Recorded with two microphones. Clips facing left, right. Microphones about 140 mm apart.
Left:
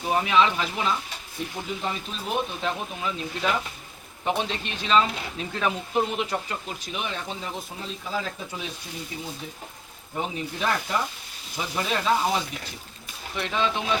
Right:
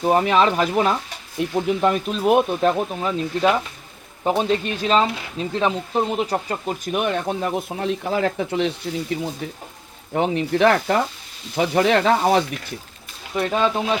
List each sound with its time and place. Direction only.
0.0 s speech: 40° right (ahead or behind)
1.4 s speech: 65° right (ahead or behind)
13.3 s speech: 45° right (ahead or behind)